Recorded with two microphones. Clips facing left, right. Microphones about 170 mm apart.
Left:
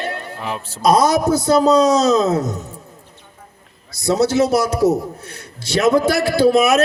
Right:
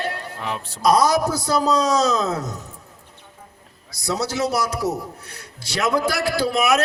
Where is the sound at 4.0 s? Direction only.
25° left (ahead or behind).